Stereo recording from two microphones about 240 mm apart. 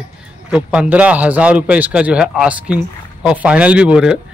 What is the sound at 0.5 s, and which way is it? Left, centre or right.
A man's voice, centre.